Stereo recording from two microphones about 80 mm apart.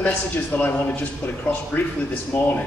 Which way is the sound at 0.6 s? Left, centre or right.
Left.